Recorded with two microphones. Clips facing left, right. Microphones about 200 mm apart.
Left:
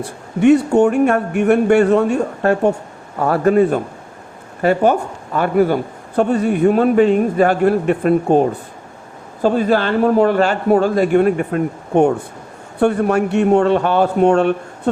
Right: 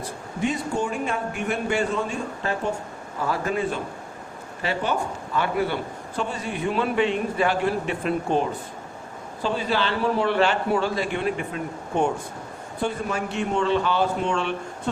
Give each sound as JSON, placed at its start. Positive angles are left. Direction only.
{"t": 0.0, "sound": "a man's voice", "side_deg": 70}